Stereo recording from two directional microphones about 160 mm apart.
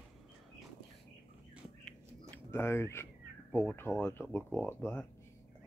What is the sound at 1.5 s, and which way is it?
Bird, 5° right (ahead or behind).